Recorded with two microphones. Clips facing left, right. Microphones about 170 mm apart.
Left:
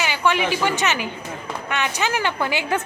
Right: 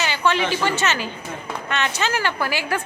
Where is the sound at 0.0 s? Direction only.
15° left (ahead or behind).